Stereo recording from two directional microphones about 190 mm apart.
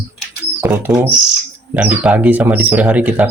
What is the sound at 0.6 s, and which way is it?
A man's voice, 10° right (ahead or behind).